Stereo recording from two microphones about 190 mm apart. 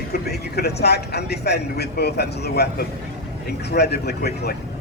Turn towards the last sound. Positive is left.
turn(degrees=60)  # may be behind; listen again after turning